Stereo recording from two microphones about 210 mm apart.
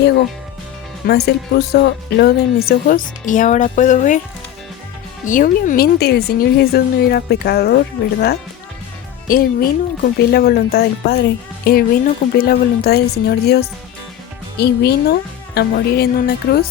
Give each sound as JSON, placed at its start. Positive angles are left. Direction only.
{"t": 1.0, "sound": "speech", "side_deg": 50}
{"t": 5.2, "sound": "speech", "side_deg": 40}
{"t": 9.2, "sound": "speech", "side_deg": 45}